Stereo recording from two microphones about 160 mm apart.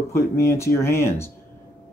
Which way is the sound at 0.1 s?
15° left (ahead or behind).